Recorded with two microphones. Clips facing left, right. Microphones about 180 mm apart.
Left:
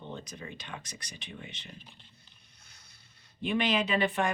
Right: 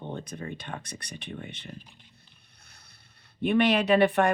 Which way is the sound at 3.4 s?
60° right (ahead or behind).